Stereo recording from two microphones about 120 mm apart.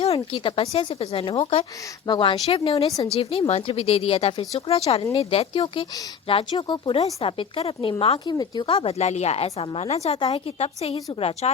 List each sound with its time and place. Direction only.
0.0 s speech: 55° left (ahead or behind)
2.0 s speech: 40° left (ahead or behind)
2.5 s speech: 50° left (ahead or behind)
8.3 s speech: 35° left (ahead or behind)
8.6 s speech: 50° left (ahead or behind)